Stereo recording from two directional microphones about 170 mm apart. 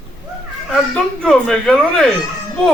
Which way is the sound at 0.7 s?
5° left (ahead or behind).